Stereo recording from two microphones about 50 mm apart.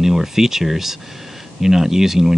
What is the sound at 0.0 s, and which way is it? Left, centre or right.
Speech, centre.